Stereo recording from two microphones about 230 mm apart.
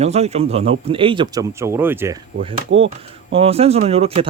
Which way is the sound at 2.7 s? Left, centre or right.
Right.